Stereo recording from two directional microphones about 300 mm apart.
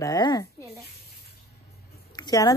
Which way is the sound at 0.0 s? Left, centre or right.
Centre.